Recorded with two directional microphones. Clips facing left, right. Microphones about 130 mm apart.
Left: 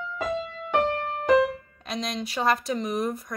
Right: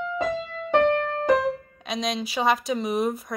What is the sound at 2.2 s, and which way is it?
Speech, centre (ahead or behind).